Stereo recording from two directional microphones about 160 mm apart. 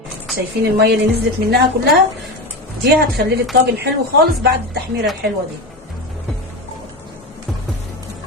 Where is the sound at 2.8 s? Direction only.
85° right.